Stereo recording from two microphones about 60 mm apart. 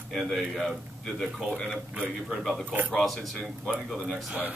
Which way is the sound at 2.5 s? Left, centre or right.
Centre.